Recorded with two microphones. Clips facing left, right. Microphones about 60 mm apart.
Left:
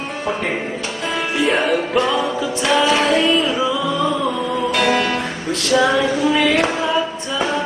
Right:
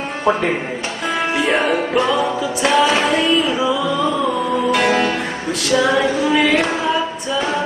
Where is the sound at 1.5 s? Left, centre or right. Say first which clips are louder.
Left 1 dB; centre.